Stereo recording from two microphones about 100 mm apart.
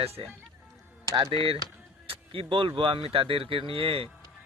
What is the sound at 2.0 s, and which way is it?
Speech, 65° right (ahead or behind).